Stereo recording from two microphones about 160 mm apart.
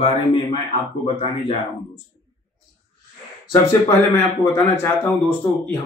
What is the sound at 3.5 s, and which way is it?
Speech, 15° left (ahead or behind).